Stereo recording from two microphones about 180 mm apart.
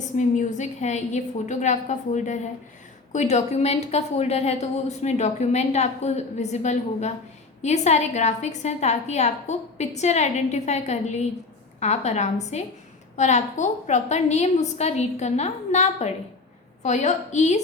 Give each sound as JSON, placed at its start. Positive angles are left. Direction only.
{"t": 0.2, "sound": "a woman's voice", "side_deg": 40}